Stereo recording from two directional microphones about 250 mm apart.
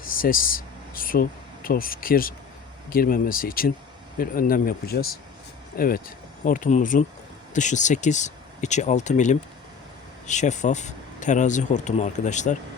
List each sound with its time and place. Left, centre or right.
0.0 s speech: left